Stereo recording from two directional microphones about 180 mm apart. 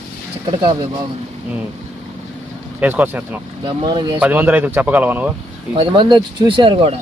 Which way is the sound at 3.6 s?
25° right (ahead or behind).